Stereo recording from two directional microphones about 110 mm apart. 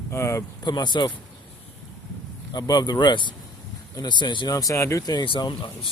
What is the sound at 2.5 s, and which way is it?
Speech, 35° left (ahead or behind).